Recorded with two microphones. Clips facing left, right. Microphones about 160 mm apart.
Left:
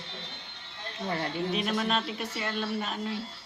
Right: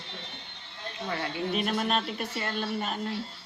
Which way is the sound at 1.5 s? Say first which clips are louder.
Right 2 dB; centre (ahead or behind).